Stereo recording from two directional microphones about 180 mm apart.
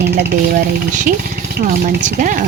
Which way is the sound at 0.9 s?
45° right (ahead or behind).